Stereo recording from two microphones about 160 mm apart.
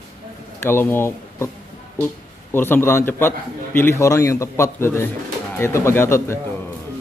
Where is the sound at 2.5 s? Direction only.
15° left (ahead or behind).